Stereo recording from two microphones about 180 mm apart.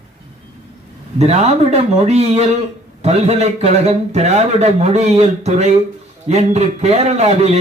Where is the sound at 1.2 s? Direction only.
35° right (ahead or behind).